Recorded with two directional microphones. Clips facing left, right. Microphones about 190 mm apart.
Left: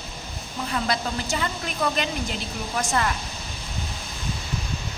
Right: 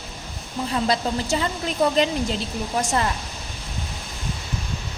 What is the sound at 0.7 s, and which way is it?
A woman's voice, 30° right (ahead or behind).